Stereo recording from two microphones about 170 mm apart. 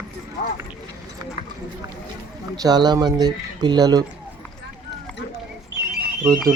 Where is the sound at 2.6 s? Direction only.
25° right (ahead or behind).